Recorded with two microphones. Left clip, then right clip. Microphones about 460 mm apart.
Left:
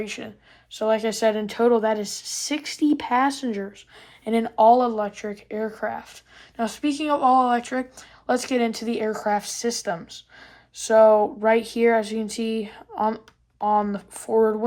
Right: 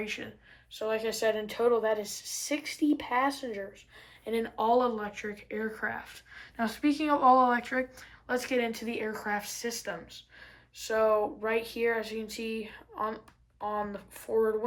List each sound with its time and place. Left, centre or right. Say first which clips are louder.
0.0 s speech: left 5 dB; centre